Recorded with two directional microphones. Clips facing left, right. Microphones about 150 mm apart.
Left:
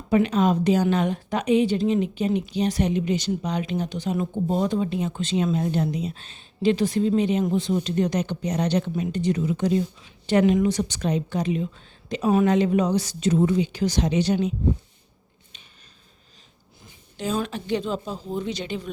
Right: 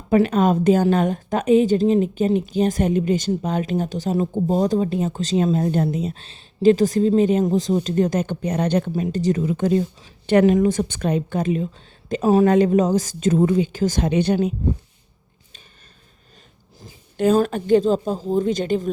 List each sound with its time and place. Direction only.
0.1 s a woman's voice: 50° right (ahead or behind)
6.2 s a woman's voice: 40° right (ahead or behind)
8.9 s a woman's voice: 40° right (ahead or behind)
17.2 s a woman's voice: 50° right (ahead or behind)